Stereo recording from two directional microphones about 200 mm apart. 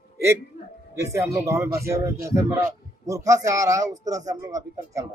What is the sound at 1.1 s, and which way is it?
Speech, 15° right (ahead or behind).